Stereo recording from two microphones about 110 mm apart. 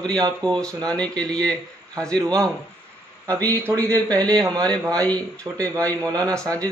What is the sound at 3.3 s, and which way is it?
Speech, 15° left (ahead or behind).